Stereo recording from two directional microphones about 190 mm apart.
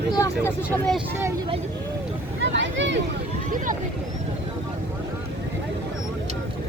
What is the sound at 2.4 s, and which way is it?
Vehicle, 75° right (ahead or behind).